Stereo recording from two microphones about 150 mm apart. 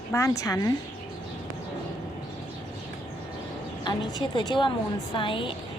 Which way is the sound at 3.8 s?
30° left (ahead or behind).